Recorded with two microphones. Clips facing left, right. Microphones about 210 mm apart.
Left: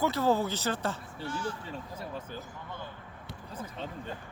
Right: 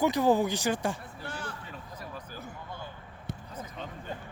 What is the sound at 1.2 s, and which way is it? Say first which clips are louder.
Speech: left 5 dB; 60° right (ahead or behind).